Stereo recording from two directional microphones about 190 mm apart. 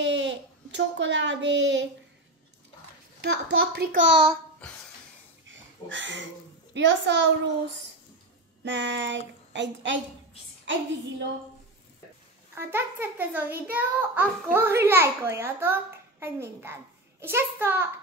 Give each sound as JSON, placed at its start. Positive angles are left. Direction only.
{"t": 0.0, "sound": "a child's voice", "side_deg": -75}
{"t": 3.2, "sound": "speech", "side_deg": -60}
{"t": 5.5, "sound": "a sound", "side_deg": -75}
{"t": 6.7, "sound": "a child's voice", "side_deg": -70}
{"t": 8.6, "sound": "a child's voice", "side_deg": -70}
{"t": 12.5, "sound": "a child's voice", "side_deg": -10}